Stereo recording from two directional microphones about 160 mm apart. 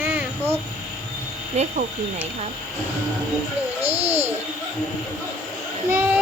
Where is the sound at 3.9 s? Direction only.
40° right (ahead or behind).